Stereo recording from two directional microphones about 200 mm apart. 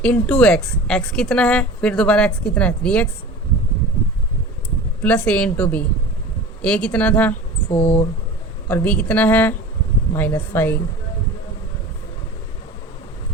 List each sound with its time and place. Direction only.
0.0 s a woman's voice: 5° left (ahead or behind)
5.0 s speech: 5° left (ahead or behind)
7.7 s speech: 30° left (ahead or behind)
8.6 s speech: 5° left (ahead or behind)